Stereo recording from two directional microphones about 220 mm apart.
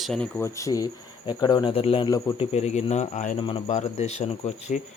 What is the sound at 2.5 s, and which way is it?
Speech, 30° left (ahead or behind).